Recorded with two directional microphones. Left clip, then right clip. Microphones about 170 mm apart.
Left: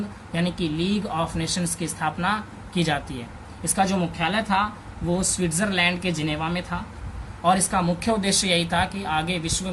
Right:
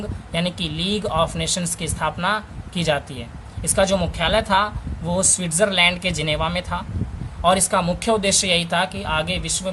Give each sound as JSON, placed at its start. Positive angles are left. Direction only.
{"t": 0.3, "sound": "speech", "side_deg": -45}
{"t": 3.6, "sound": "speech", "side_deg": -50}